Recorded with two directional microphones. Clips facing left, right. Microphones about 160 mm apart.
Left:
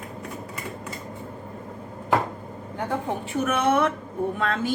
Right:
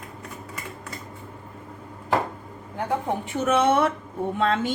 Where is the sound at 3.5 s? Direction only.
30° right (ahead or behind).